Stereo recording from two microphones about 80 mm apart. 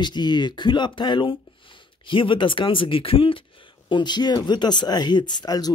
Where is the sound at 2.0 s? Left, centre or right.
Left.